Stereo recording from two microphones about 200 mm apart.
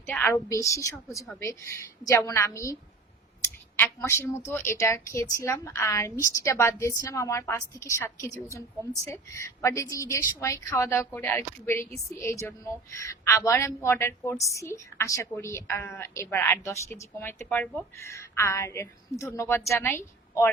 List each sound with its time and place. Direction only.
0.1 s a woman's voice: 10° left (ahead or behind)
3.8 s a woman's voice: 10° left (ahead or behind)